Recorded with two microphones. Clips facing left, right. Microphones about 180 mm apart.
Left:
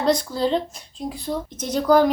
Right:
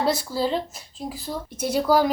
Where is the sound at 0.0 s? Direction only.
5° right (ahead or behind).